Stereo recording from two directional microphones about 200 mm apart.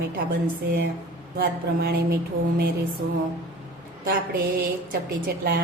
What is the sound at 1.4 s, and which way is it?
Speech, 50° right (ahead or behind).